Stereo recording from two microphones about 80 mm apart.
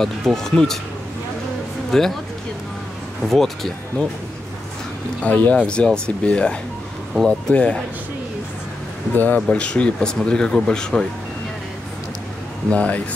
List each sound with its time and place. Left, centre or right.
0.0 s speech: centre
1.9 s speech: centre
3.3 s speech: centre
5.2 s speech: centre
9.1 s speech: left
12.6 s speech: centre